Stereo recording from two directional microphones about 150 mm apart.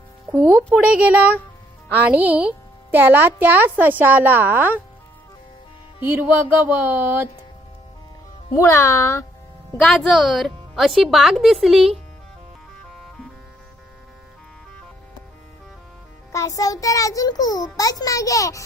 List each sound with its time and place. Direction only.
0.3 s a woman's voice: 10° right (ahead or behind)
6.0 s a woman's voice: 15° right (ahead or behind)
8.5 s a child's voice: 20° left (ahead or behind)
9.8 s a woman's voice: centre (ahead or behind)
16.3 s a child's voice: 20° left (ahead or behind)